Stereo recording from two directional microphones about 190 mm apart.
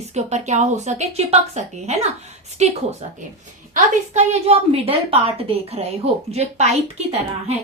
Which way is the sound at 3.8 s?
35° right (ahead or behind).